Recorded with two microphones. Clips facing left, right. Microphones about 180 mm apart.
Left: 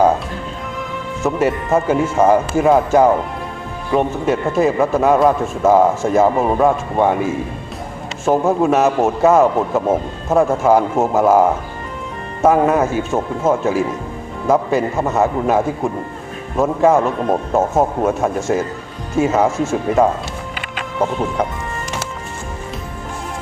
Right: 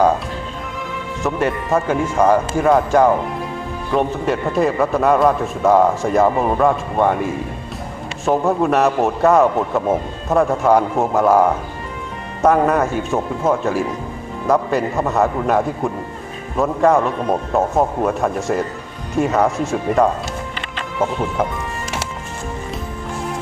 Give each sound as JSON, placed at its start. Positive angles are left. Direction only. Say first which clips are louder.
{"t": 1.2, "sound": "a man's voice", "louder": "left 3 dB", "side_deg": 5}